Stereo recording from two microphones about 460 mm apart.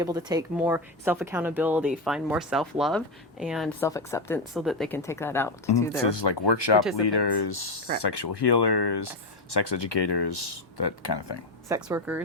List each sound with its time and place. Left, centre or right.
0.0 s speech: centre
6.0 s speech: left
11.7 s speech: centre